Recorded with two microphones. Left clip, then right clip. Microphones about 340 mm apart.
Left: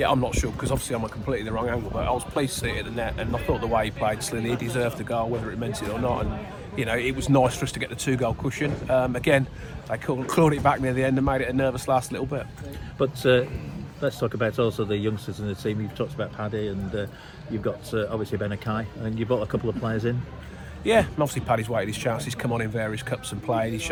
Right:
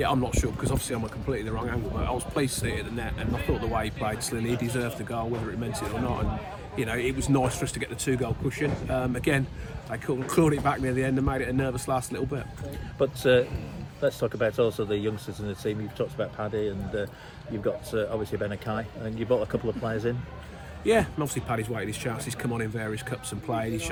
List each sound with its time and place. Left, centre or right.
0.0 s speech: centre
6.7 s speech: centre
13.0 s speech: left
20.8 s speech: centre